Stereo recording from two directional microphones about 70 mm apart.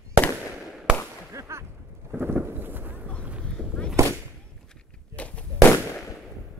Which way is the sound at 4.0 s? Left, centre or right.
Right.